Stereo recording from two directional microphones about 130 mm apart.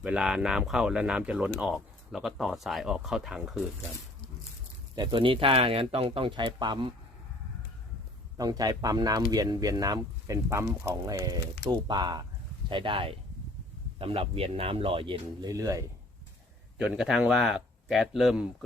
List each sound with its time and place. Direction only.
0.0 s speech: 5° right (ahead or behind)
4.9 s speech: 40° right (ahead or behind)
8.4 s speech: 30° right (ahead or behind)
16.7 s speech: 5° right (ahead or behind)